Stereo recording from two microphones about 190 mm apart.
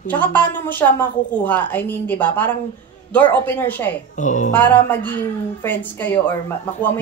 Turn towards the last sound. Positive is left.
turn(degrees=10)  # may be behind; listen again after turning